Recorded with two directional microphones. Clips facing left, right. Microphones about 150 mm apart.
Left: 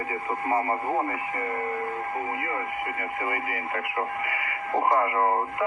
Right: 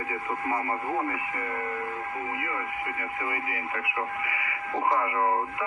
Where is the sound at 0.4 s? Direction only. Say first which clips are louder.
Left 5 dB; 30° left (ahead or behind).